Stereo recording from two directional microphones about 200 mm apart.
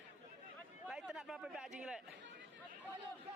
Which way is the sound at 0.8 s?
5° right (ahead or behind).